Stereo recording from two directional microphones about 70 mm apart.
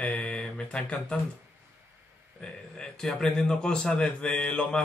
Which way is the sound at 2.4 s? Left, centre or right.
Centre.